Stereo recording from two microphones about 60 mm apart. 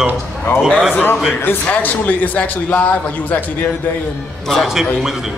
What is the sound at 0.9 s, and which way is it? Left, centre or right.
A man's voice, left.